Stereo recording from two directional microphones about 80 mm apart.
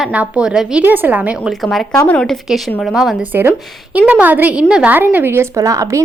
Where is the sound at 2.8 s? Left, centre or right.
Centre.